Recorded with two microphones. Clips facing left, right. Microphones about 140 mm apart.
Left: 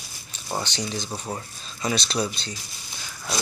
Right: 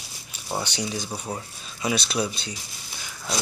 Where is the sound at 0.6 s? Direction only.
10° right (ahead or behind).